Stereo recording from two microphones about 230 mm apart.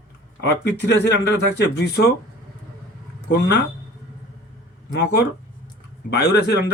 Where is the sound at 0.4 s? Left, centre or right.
Left.